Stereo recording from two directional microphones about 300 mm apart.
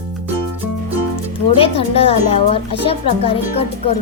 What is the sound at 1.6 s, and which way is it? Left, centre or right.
Music, centre.